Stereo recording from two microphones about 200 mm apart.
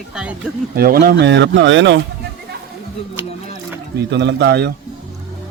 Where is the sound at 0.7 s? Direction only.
50° right (ahead or behind); by 2.0 s 65° right (ahead or behind).